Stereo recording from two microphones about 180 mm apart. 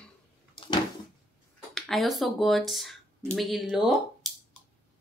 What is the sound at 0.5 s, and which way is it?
Cupboard open or close, 25° left (ahead or behind).